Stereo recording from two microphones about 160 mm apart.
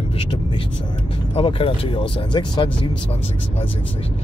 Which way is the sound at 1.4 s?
35° left (ahead or behind).